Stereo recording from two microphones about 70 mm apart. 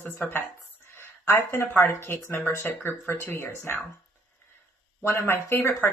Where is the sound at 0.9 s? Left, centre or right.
Left.